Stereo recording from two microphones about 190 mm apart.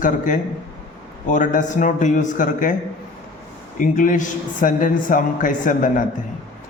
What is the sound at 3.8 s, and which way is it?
A man's voice, 45° left (ahead or behind).